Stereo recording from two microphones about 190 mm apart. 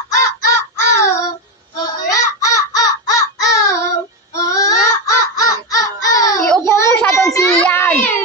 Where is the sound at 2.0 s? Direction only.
20° left (ahead or behind).